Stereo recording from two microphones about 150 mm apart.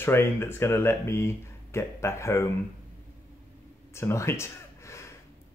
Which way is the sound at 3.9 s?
20° left (ahead or behind).